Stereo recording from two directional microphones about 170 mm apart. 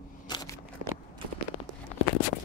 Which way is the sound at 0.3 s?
25° left (ahead or behind).